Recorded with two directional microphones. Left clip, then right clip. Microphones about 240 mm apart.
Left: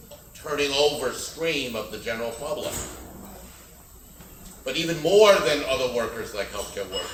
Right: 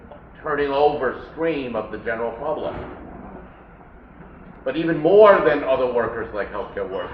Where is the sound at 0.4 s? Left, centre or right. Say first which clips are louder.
Right 4 dB; left.